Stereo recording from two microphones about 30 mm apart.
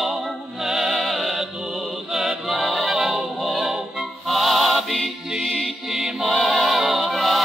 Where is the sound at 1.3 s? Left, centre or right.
Centre.